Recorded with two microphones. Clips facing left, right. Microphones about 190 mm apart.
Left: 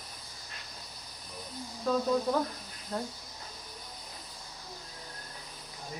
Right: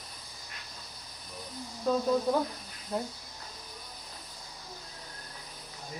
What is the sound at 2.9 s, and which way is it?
Speech, 10° right (ahead or behind).